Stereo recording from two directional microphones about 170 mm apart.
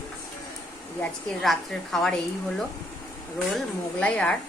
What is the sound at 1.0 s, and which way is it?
A woman's voice, centre (ahead or behind).